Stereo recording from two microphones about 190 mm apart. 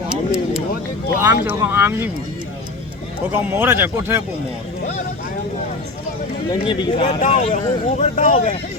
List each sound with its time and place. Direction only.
0.1 s a sound: 5° right (ahead or behind)
1.2 s speech: 10° right (ahead or behind)
3.3 s speech: 10° right (ahead or behind)
6.5 s speech: 25° left (ahead or behind)